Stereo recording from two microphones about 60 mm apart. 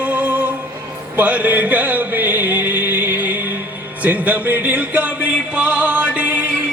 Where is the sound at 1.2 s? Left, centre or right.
Right.